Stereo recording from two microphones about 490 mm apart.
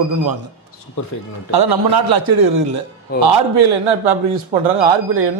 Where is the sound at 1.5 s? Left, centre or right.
Right.